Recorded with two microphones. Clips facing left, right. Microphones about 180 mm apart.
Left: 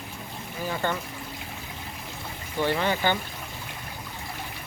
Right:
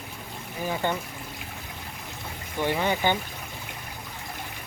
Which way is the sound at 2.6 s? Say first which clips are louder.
Even; 15° right (ahead or behind).